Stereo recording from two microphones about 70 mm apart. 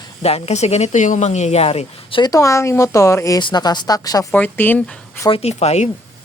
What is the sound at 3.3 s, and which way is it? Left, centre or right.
Speech, left.